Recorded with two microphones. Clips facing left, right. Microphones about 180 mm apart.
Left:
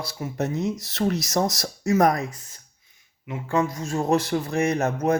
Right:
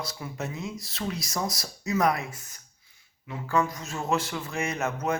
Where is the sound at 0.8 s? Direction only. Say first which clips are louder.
Left 9 dB; 75° left (ahead or behind).